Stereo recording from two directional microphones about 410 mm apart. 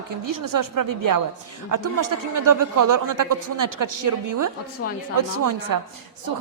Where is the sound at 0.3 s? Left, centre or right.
Right.